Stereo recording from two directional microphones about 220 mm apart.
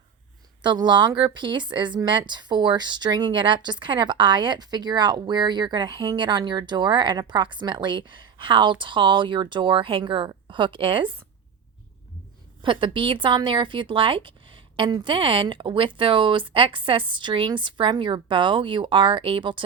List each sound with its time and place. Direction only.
0.6 s speech: 20° right (ahead or behind)
12.6 s speech: 20° right (ahead or behind)